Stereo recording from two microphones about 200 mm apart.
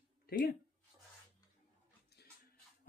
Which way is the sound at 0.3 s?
50° left (ahead or behind).